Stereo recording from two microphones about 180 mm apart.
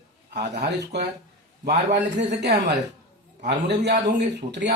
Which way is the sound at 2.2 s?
70° right (ahead or behind).